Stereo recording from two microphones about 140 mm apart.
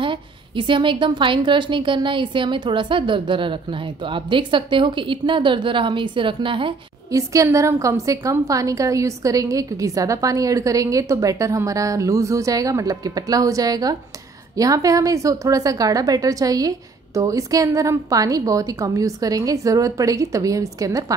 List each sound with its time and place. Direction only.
0.0 s a woman's voice: 35° right (ahead or behind)
7.1 s a woman's voice: 25° right (ahead or behind)